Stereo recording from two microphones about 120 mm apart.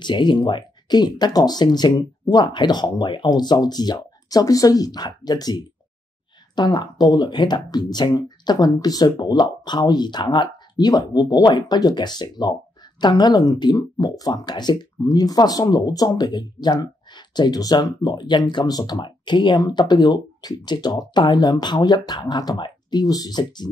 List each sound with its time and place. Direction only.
0.0 s speech: 40° left (ahead or behind)